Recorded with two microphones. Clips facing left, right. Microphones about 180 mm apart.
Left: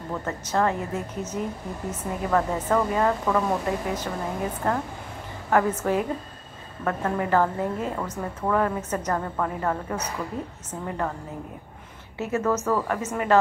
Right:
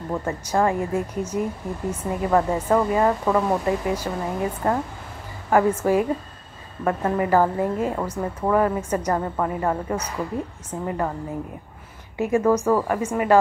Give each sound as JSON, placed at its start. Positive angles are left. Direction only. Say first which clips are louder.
{"t": 0.1, "sound": "a woman's voice", "louder": "right 3 dB", "side_deg": -10}
{"t": 12.2, "sound": "a woman's voice", "louder": "right 5 dB", "side_deg": -10}